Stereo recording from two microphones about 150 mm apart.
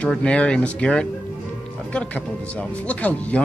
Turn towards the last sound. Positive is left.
turn(degrees=10)  # may be behind; listen again after turning